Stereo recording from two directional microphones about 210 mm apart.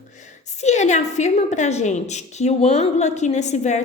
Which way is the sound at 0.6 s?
35° left (ahead or behind).